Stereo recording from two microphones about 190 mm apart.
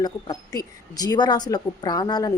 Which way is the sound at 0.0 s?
20° left (ahead or behind).